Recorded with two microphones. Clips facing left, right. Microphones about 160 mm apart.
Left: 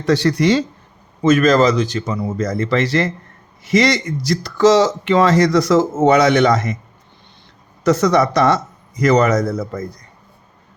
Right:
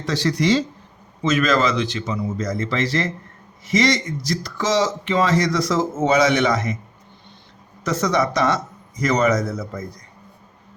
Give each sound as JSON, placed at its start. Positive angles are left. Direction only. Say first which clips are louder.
{"t": 0.0, "sound": "speech", "louder": "left 6 dB", "side_deg": 60}
{"t": 2.2, "sound": "speech", "louder": "left 4 dB", "side_deg": 60}
{"t": 7.9, "sound": "speech", "louder": "left 6 dB", "side_deg": 70}